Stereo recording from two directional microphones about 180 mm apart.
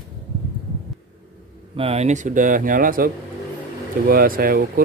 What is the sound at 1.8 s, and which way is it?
Speech, 35° right (ahead or behind).